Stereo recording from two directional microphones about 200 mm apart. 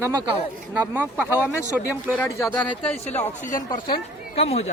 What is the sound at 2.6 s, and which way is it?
Speech, 30° left (ahead or behind).